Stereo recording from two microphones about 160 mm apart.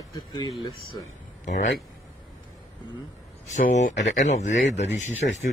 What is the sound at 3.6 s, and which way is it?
Speech, 50° left (ahead or behind).